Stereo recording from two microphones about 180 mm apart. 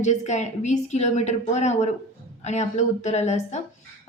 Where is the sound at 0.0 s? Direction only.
40° left (ahead or behind).